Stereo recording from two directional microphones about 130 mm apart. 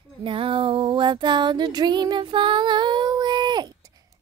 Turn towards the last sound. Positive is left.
turn(degrees=-35)  # may be behind; listen again after turning